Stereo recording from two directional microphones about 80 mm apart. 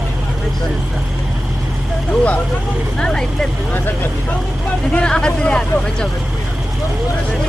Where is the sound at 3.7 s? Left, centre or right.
Left.